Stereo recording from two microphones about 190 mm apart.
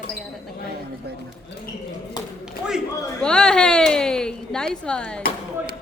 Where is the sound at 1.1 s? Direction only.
60° right (ahead or behind).